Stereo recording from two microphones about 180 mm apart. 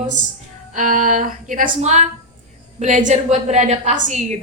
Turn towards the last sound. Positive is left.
turn(degrees=-40)  # may be behind; listen again after turning